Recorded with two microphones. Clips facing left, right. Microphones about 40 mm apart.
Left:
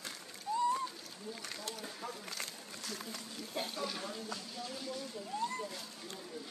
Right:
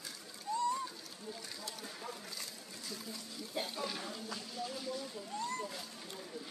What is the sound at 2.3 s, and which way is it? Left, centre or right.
Speech, left.